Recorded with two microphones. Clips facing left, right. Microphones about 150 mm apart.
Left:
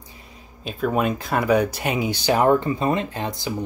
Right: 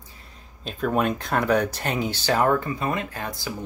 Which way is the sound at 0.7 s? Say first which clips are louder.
Left 1 dB; 5° left (ahead or behind).